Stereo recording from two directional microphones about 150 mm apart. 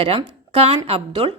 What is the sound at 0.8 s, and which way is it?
Speech, 40° right (ahead or behind).